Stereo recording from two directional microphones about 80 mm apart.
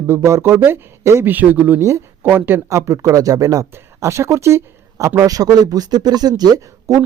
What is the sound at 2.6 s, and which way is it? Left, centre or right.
Speech, right.